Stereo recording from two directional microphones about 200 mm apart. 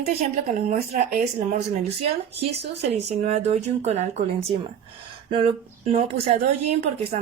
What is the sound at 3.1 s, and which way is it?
Speech, 35° right (ahead or behind).